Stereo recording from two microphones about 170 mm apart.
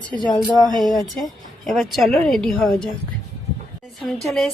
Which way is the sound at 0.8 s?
Centre (ahead or behind).